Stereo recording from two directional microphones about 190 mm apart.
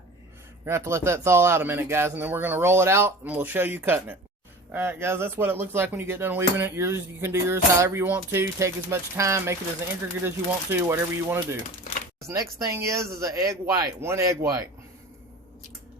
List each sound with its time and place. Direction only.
0.6 s speech: 15° right (ahead or behind)